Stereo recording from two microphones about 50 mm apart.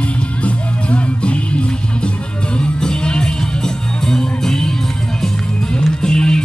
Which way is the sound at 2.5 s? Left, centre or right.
Centre.